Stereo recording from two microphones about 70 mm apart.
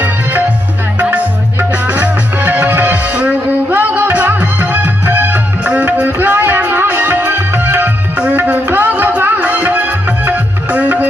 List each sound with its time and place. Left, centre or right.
1.7 s music: right